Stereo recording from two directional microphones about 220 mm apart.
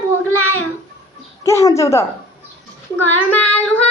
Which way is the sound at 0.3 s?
70° left (ahead or behind).